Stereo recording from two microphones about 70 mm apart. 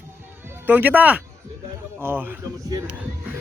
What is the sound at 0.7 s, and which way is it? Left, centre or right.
Speech, right.